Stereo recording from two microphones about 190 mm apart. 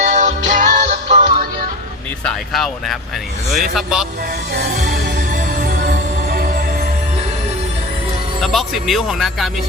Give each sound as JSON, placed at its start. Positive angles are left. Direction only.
{"t": 0.0, "sound": "music", "side_deg": -40}
{"t": 2.2, "sound": "speech", "side_deg": 0}
{"t": 4.5, "sound": "music", "side_deg": -60}
{"t": 4.8, "sound": "music", "side_deg": -40}
{"t": 8.4, "sound": "speech", "side_deg": 0}